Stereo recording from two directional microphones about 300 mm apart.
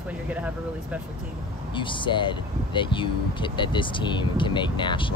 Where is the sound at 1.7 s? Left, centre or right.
Centre.